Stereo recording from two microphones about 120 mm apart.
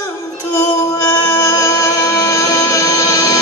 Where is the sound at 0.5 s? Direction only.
25° left (ahead or behind).